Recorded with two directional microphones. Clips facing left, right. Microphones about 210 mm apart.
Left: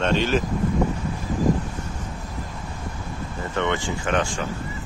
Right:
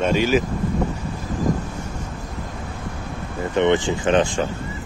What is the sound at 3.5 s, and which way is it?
Speech, 20° right (ahead or behind).